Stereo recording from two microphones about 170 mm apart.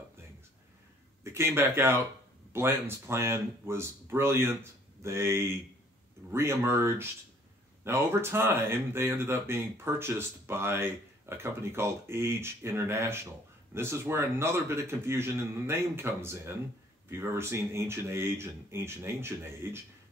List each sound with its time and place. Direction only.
1.2 s speech: 15° right (ahead or behind)